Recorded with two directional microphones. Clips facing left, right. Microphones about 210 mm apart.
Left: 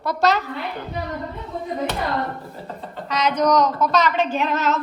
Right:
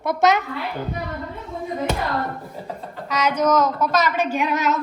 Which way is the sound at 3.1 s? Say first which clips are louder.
Even; 10° right (ahead or behind).